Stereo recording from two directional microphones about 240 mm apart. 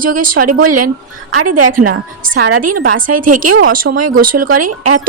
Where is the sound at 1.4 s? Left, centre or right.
Right.